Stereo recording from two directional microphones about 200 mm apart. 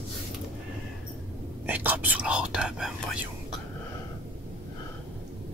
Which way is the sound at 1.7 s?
10° right (ahead or behind).